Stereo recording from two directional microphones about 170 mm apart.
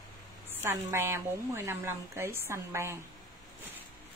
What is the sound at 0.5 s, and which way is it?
A woman's voice, 15° right (ahead or behind).